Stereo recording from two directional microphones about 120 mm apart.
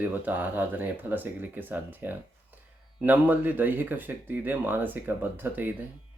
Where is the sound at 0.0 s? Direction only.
15° right (ahead or behind).